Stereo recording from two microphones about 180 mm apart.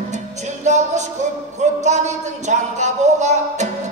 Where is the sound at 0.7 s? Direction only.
40° right (ahead or behind).